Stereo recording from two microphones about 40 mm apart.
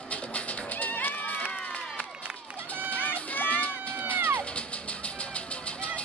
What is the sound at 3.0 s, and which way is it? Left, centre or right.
Run, left.